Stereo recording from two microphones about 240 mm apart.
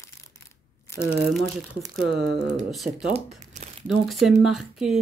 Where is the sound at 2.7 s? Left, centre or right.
Centre.